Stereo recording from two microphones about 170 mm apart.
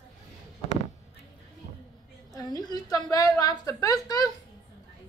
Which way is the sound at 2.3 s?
25° left (ahead or behind).